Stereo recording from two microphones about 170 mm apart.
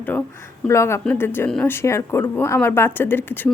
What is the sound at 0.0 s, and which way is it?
A woman's voice, 10° left (ahead or behind).